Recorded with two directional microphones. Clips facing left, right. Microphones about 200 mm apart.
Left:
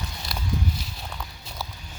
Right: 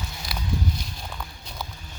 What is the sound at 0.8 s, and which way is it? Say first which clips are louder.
Walk: even; centre (ahead or behind).